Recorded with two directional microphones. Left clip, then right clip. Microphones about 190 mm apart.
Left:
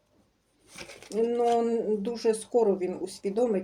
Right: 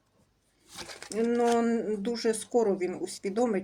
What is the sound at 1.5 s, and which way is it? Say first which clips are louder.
Speech: left 2 dB; 15° right (ahead or behind).